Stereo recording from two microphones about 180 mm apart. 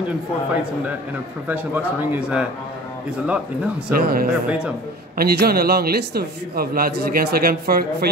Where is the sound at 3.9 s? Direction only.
55° right (ahead or behind).